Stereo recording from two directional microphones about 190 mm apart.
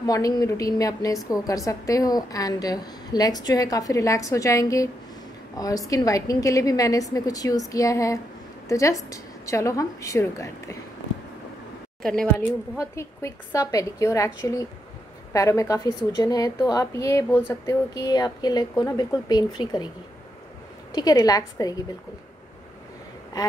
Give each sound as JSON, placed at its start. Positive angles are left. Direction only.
{"t": 0.0, "sound": "a woman's voice", "side_deg": 20}
{"t": 12.0, "sound": "speech", "side_deg": 5}
{"t": 12.7, "sound": "a woman's voice", "side_deg": 15}
{"t": 20.9, "sound": "a woman's voice", "side_deg": 20}